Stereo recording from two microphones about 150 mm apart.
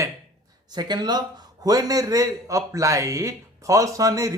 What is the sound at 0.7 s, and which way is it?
A man's voice, 25° right (ahead or behind).